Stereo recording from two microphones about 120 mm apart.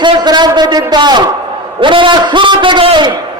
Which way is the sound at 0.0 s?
35° right (ahead or behind).